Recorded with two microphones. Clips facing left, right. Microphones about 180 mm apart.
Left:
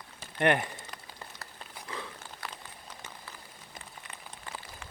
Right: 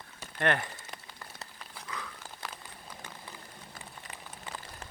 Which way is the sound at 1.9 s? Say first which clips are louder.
Left 2 dB; 30° left (ahead or behind).